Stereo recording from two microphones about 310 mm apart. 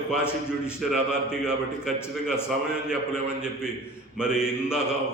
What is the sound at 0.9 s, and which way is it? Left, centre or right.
A man's voice, centre.